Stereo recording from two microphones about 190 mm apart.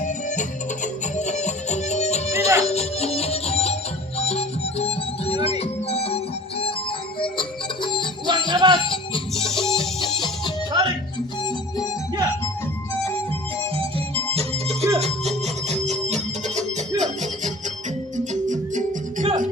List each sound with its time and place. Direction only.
0.0 s music: 40° left (ahead or behind); by 8.0 s 25° left (ahead or behind)
8.3 s music: 20° right (ahead or behind)
8.8 s music: 25° left (ahead or behind)
9.3 s music: centre (ahead or behind)
9.7 s music: 25° left (ahead or behind)
10.7 s music: 20° right (ahead or behind)
14.3 s music: 35° right (ahead or behind)